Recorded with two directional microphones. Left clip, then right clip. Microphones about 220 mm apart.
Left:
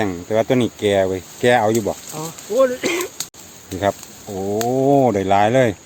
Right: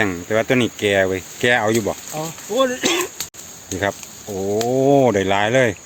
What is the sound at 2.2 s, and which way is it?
Speech, 45° right (ahead or behind).